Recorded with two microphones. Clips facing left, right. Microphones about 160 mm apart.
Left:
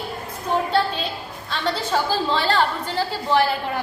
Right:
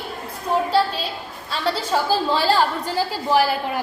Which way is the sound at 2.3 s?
10° right (ahead or behind).